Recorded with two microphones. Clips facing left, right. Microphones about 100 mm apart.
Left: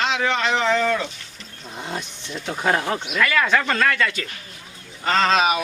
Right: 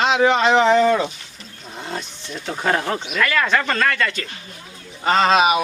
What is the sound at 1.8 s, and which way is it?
Speech, 10° left (ahead or behind).